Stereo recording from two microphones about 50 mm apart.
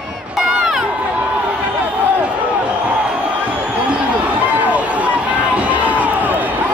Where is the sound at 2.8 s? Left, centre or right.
Right.